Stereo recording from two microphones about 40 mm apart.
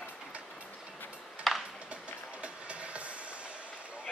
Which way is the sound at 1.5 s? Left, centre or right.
Centre.